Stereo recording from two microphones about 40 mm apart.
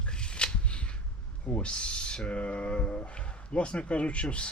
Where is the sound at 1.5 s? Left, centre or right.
Left.